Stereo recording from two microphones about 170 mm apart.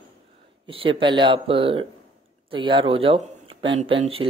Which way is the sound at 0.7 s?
30° right (ahead or behind).